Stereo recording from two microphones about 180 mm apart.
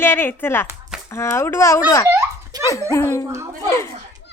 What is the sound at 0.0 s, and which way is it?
A child's voice, 10° left (ahead or behind).